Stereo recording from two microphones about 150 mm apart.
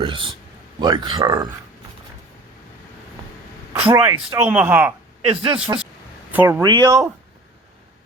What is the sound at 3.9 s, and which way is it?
Speech, 25° right (ahead or behind).